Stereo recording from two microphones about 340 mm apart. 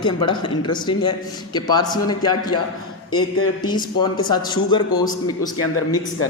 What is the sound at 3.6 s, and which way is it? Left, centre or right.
A man's voice, centre.